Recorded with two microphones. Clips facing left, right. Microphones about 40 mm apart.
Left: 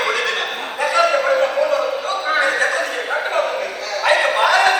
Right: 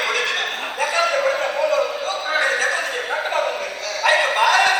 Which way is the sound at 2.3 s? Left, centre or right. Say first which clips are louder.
Left 2 dB; left.